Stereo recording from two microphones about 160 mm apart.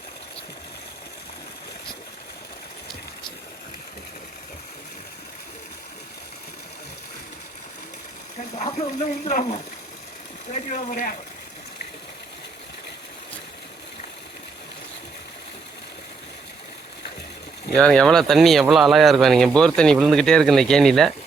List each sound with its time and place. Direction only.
9.0 s speech: 45° left (ahead or behind)
17.7 s speech: 5° left (ahead or behind)